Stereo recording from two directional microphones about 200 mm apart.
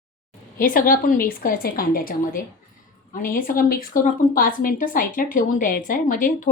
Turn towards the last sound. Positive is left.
turn(degrees=45)  # may be behind; listen again after turning